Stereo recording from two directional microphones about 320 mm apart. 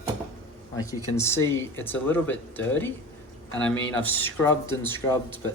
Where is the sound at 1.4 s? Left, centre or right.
Left.